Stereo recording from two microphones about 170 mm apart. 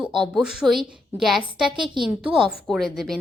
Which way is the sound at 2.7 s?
Centre (ahead or behind).